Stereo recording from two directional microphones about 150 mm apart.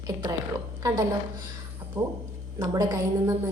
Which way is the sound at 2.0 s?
25° right (ahead or behind).